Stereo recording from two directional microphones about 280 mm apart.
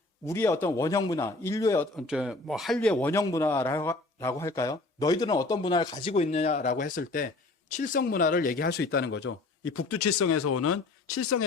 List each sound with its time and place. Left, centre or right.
0.3 s speech: centre
2.0 s speech: centre; by 11.4 s left